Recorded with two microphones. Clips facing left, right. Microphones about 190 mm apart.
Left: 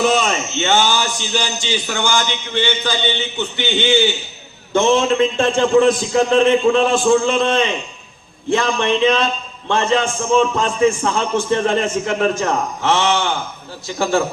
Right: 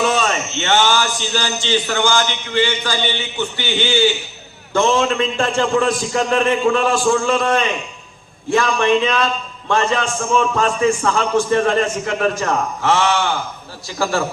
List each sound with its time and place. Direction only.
0.2 s a man's voice: 15° left (ahead or behind)